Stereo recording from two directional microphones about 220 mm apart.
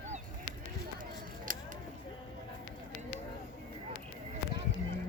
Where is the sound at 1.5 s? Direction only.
40° right (ahead or behind).